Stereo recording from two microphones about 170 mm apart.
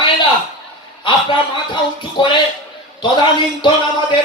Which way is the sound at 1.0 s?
30° left (ahead or behind).